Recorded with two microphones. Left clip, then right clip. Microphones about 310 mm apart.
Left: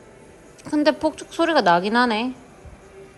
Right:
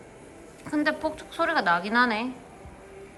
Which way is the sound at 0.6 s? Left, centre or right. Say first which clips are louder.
Left 7 dB; centre.